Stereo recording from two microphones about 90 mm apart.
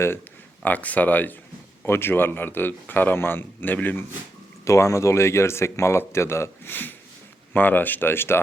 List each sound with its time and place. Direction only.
0.6 s speech: 15° left (ahead or behind)
4.6 s speech: 35° left (ahead or behind)